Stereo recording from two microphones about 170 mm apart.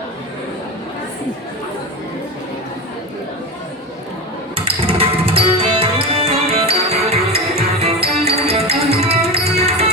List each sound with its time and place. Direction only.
4.5 s music: 35° right (ahead or behind)